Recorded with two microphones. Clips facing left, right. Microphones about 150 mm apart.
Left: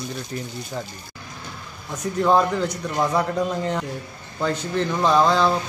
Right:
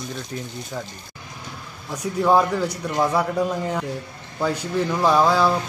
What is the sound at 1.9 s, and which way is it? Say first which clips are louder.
Speech: right 1 dB; 10° right (ahead or behind).